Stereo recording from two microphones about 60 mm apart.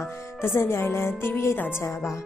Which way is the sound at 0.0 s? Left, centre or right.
Left.